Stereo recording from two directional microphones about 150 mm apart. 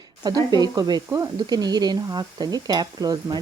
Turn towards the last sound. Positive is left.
turn(degrees=-25)  # may be behind; listen again after turning